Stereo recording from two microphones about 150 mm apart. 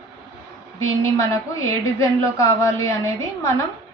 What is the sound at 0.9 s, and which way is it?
A woman's voice, 20° left (ahead or behind).